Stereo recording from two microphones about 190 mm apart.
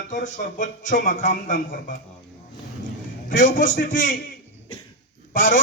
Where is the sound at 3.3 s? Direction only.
45° left (ahead or behind).